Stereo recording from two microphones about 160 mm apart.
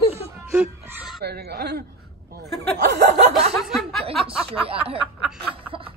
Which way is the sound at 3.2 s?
45° right (ahead or behind).